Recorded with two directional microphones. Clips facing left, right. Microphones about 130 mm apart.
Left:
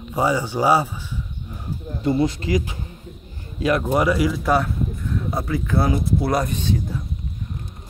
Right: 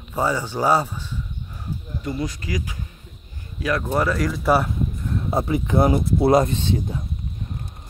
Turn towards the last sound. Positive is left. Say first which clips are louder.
# even
turn(degrees=-25)  # may be behind; listen again after turning